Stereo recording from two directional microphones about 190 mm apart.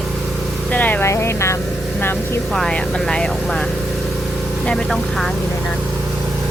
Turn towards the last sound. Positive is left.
turn(degrees=0)  # may be behind; listen again after turning